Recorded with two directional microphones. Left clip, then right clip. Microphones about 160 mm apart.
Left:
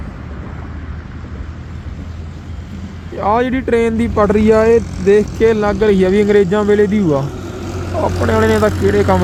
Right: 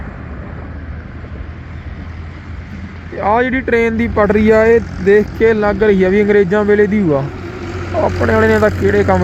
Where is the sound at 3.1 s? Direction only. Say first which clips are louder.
Right 1 dB; 15° left (ahead or behind).